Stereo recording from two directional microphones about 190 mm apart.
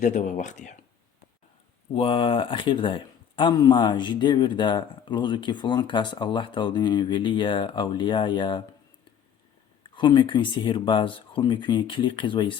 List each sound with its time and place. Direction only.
0.0 s speech: 40° left (ahead or behind)
1.9 s speech: 30° left (ahead or behind)
9.9 s speech: 25° left (ahead or behind)